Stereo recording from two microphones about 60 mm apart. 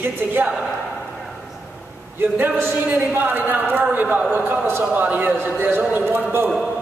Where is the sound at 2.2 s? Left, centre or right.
Right.